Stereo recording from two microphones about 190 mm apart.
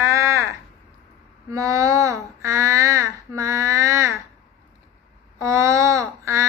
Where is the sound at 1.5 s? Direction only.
15° right (ahead or behind).